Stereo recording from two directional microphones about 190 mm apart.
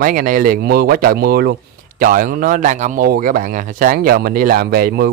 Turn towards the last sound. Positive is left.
turn(degrees=-55)  # may be behind; listen again after turning